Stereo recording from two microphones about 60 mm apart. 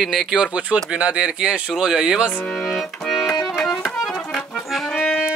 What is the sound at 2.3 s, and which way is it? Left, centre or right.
Speech, left.